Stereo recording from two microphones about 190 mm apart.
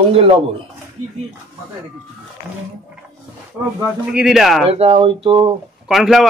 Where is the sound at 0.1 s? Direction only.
30° right (ahead or behind).